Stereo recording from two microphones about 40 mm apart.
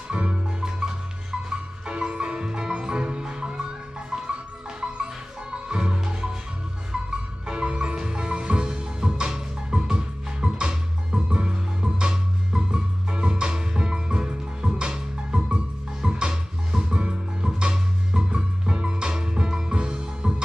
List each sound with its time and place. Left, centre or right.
0.1 s music: right